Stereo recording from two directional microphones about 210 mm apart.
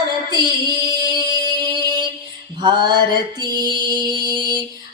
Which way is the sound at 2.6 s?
20° right (ahead or behind).